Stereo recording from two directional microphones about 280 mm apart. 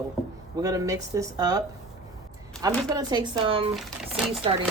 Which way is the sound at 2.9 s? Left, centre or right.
Centre.